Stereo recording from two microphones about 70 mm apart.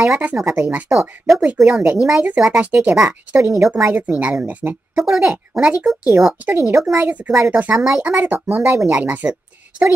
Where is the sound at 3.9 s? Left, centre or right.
Right.